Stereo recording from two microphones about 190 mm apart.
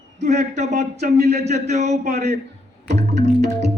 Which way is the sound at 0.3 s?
35° right (ahead or behind).